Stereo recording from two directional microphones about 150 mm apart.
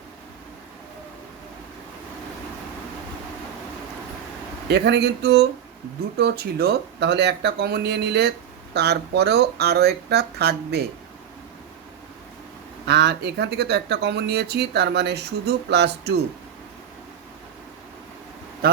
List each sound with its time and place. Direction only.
4.7 s speech: 90° right
12.8 s speech: 90° right
18.6 s speech: 90° right